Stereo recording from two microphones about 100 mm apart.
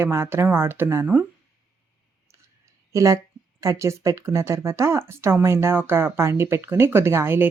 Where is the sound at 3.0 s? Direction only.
35° right (ahead or behind).